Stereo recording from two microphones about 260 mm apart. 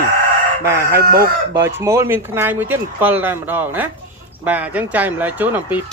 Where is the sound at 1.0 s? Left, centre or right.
Right.